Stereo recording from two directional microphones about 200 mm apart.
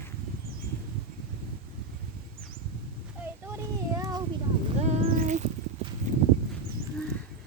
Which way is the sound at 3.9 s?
15° right (ahead or behind).